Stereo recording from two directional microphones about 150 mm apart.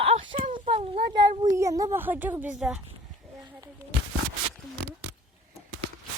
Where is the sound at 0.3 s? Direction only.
35° right (ahead or behind).